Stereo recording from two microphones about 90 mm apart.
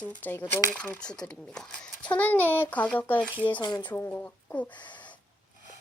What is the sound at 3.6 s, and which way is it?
Speech, 55° left (ahead or behind).